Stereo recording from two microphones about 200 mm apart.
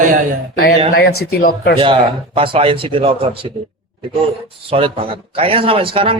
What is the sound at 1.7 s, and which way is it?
Speech, 25° right (ahead or behind).